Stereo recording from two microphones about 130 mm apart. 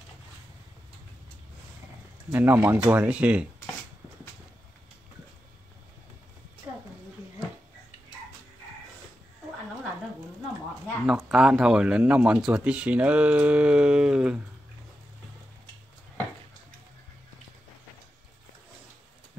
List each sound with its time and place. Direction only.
2.3 s speech: 15° right (ahead or behind)
11.1 s speech: 5° right (ahead or behind)